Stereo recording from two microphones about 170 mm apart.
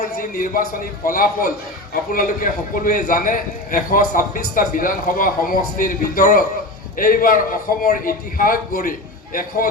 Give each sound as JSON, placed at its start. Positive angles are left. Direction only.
{"t": 0.2, "sound": "a man's voice", "side_deg": 55}